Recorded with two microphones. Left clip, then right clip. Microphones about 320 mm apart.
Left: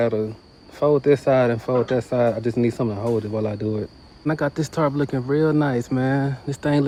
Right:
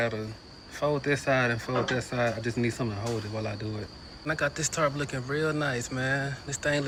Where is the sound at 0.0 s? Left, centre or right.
Centre.